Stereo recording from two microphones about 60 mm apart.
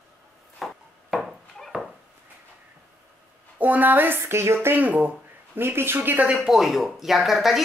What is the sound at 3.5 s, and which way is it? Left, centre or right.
Speech, right.